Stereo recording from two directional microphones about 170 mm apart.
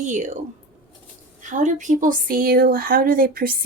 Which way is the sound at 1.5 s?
45° right (ahead or behind).